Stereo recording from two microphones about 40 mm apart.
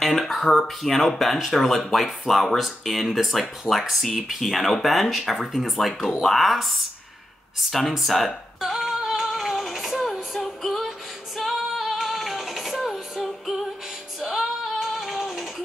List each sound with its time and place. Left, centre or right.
0.2 s a sound: centre
0.5 s speech: centre
7.7 s speech: centre
8.5 s female singing: centre